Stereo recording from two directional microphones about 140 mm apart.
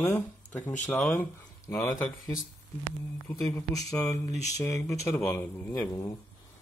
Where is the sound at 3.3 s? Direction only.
20° left (ahead or behind).